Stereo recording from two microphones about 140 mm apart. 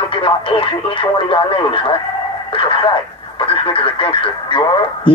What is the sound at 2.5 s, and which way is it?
Radio, 40° left (ahead or behind).